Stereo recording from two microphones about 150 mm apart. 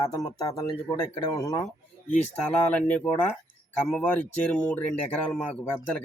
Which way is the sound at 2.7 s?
10° left (ahead or behind).